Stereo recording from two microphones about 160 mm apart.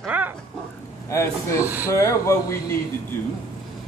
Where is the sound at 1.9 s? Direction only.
15° left (ahead or behind).